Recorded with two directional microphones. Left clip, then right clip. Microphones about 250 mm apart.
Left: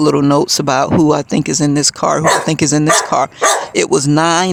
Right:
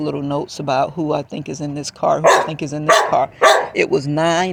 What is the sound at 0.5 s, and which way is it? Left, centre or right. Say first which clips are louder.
Speech: left 5 dB; left.